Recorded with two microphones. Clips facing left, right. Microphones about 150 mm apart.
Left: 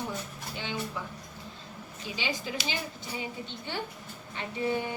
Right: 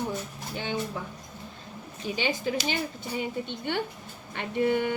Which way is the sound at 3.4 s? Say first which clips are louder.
Right 6 dB; 60° right (ahead or behind).